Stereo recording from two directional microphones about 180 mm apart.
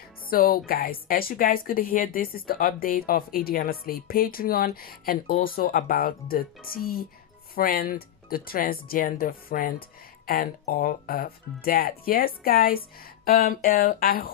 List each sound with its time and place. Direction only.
0.3 s speech: 55° left (ahead or behind)